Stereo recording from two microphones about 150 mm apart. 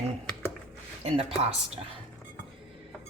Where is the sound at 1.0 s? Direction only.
40° right (ahead or behind).